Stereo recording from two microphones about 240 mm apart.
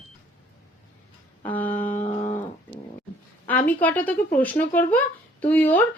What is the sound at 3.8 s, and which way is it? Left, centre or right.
A child's voice, centre.